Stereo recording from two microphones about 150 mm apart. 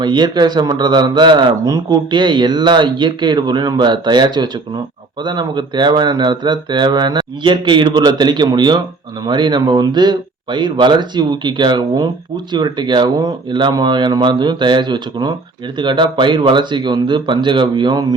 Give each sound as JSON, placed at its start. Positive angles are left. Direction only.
{"t": 0.0, "sound": "speech", "side_deg": -30}